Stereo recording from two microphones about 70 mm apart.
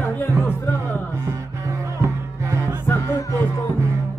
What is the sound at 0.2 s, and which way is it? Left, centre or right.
Speech, left.